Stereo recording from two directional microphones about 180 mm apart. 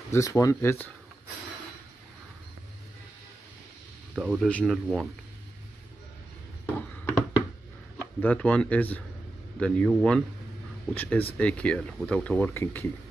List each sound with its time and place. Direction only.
0.1 s speech: 15° left (ahead or behind)
4.1 s speech: 5° right (ahead or behind)
4.5 s speech: 10° left (ahead or behind)
6.6 s a sound: 10° left (ahead or behind)
8.2 s speech: 10° left (ahead or behind)